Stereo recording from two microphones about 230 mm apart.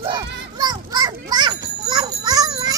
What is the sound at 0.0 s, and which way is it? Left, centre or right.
Children playing, centre.